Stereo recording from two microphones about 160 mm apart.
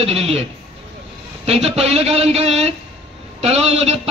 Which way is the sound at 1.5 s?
40° right (ahead or behind).